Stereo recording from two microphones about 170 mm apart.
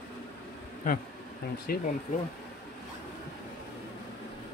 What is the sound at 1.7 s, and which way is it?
Speech, 60° left (ahead or behind).